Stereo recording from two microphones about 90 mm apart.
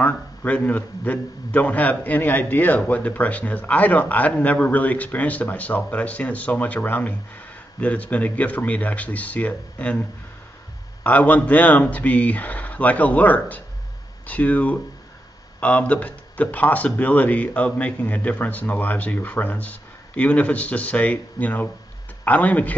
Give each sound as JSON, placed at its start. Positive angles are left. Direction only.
{"t": 0.0, "sound": "a man's voice", "side_deg": 20}
{"t": 11.1, "sound": "speech", "side_deg": 15}